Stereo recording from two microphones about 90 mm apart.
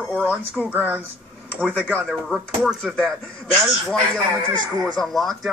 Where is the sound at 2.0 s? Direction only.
Centre (ahead or behind).